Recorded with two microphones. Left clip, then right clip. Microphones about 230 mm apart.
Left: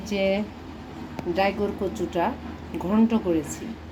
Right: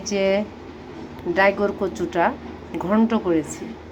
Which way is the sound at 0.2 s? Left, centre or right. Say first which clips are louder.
Right 4 dB; right.